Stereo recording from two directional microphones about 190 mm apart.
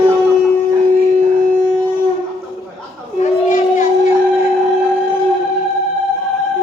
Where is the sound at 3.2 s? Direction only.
40° left (ahead or behind).